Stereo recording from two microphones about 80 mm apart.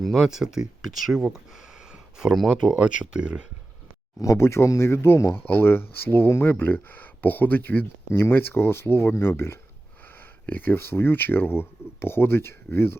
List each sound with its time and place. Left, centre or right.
0.0 s speech: centre
1.9 s a sound: centre
2.6 s speech: centre
4.2 s speech: left